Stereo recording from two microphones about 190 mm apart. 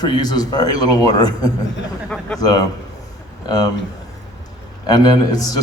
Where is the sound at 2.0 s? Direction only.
5° left (ahead or behind).